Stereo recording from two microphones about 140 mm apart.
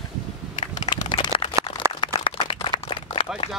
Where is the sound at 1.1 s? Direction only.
35° left (ahead or behind).